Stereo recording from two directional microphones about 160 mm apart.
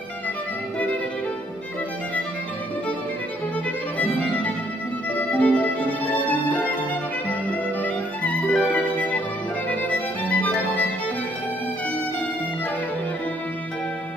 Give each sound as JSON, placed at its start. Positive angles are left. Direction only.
{"t": 4.0, "sound": "music", "side_deg": 10}